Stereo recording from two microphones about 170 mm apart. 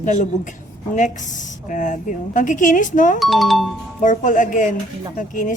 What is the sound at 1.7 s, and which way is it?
A woman's voice, 50° left (ahead or behind).